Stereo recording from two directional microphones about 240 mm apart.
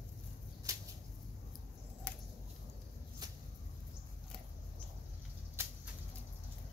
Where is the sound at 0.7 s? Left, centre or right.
Centre.